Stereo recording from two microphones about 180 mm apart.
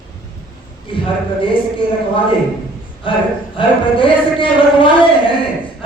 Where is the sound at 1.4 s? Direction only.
30° left (ahead or behind).